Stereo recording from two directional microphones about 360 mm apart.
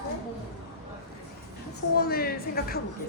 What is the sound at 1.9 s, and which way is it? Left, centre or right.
Speech, left.